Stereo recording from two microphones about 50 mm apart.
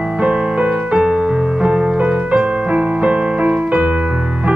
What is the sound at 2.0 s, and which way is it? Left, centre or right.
Music, right.